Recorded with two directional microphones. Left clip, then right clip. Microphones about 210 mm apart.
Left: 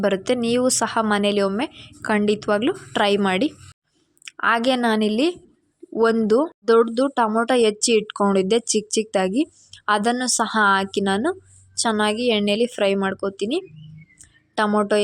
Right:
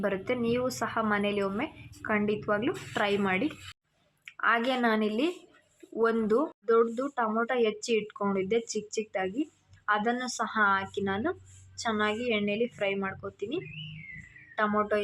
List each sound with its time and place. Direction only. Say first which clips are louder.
0.0 s speech: left 9 dB; 40° left (ahead or behind)